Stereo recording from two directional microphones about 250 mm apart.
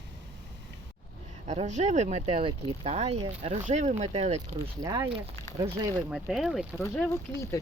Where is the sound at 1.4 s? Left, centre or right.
Right.